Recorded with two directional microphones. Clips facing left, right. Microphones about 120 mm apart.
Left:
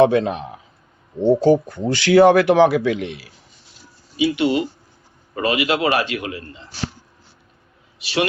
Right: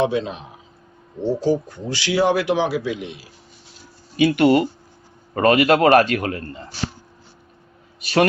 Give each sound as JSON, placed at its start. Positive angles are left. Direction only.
{"t": 0.0, "sound": "a man's voice", "side_deg": 60}
{"t": 4.2, "sound": "a man's voice", "side_deg": -55}
{"t": 7.9, "sound": "a man's voice", "side_deg": -45}